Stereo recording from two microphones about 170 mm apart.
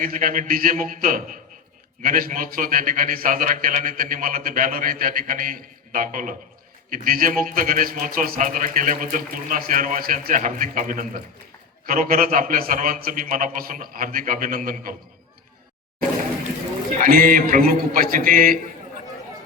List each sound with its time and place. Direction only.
0.0 s a man's voice: 55° right (ahead or behind)
17.0 s a man's voice: 55° right (ahead or behind)